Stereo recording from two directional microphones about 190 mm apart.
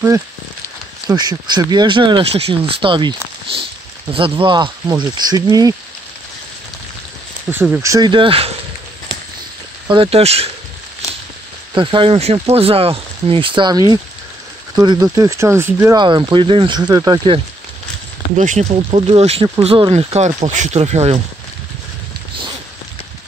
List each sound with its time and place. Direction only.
1.0 s speech: 20° right (ahead or behind)
7.5 s speech: 10° right (ahead or behind)
7.9 s speech: 25° right (ahead or behind)
9.8 s speech: 30° right (ahead or behind)
11.7 s speech: 25° right (ahead or behind)
18.3 s speech: 40° right (ahead or behind)